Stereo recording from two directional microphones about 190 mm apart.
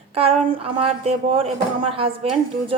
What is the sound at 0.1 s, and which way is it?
A woman's voice, 30° right (ahead or behind).